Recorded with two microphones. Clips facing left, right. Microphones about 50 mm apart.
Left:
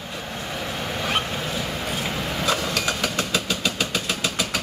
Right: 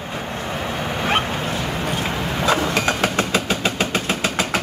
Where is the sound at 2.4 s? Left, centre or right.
Right.